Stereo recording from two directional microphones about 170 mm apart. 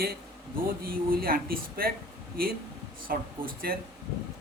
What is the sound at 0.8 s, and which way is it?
A man's voice, 60° right (ahead or behind).